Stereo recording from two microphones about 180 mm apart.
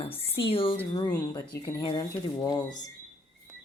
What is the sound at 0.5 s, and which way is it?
Speech, 30° left (ahead or behind).